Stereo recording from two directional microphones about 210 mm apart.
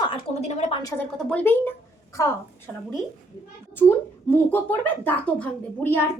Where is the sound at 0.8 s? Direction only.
15° left (ahead or behind).